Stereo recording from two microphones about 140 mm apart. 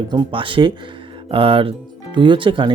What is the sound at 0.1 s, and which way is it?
Speech, 35° right (ahead or behind).